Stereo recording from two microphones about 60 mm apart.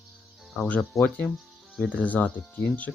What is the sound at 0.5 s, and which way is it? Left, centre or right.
Speech, centre.